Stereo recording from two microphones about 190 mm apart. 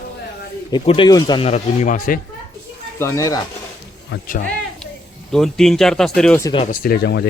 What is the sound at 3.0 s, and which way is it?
Speech, 15° left (ahead or behind).